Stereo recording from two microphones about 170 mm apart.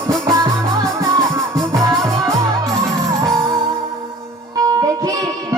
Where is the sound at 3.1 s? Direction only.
20° right (ahead or behind).